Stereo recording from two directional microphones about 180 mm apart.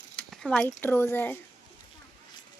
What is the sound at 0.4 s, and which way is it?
Speech, 5° left (ahead or behind).